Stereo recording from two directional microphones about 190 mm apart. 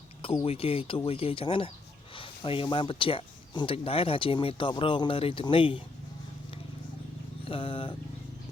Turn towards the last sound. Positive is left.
turn(degrees=25)  # may be behind; listen again after turning